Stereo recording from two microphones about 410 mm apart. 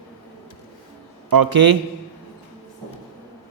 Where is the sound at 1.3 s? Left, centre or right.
Right.